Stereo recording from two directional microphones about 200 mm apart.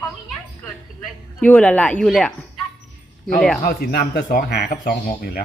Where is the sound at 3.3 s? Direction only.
Centre (ahead or behind).